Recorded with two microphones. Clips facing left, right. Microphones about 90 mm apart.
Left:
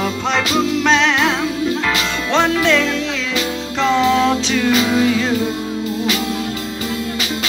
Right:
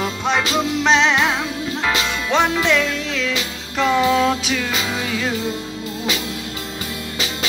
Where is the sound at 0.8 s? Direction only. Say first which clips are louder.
Right 1 dB; 15° right (ahead or behind); by 5.3 s centre (ahead or behind).